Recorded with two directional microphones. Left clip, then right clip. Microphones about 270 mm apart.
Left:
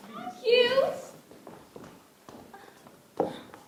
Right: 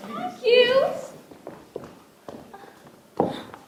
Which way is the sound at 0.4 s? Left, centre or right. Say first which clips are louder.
Right 5 dB; right.